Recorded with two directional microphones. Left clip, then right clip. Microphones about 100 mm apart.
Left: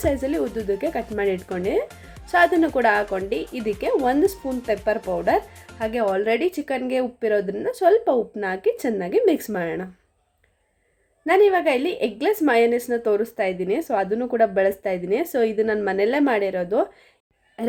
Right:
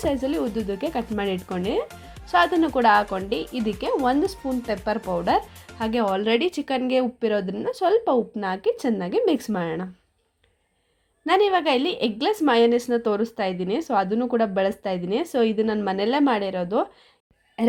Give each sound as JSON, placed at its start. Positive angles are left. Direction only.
{"t": 0.0, "sound": "a woman's voice", "side_deg": -20}
{"t": 5.0, "sound": "a woman's voice", "side_deg": -35}
{"t": 5.8, "sound": "a woman's voice", "side_deg": -45}
{"t": 11.3, "sound": "a woman's voice", "side_deg": -45}
{"t": 17.6, "sound": "a sound", "side_deg": -35}